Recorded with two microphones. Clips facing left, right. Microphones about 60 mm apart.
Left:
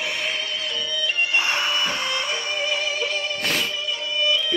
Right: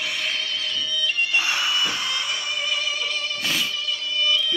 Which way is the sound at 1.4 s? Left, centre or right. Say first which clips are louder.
Left 1 dB; left.